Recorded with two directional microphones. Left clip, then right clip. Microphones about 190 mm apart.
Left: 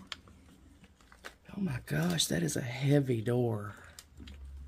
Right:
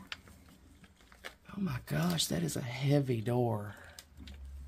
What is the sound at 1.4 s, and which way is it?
Speech, centre (ahead or behind).